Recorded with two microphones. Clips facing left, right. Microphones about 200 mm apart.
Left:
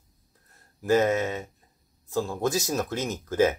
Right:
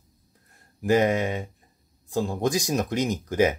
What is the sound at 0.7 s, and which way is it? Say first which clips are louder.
Speech: right 1 dB; 15° right (ahead or behind).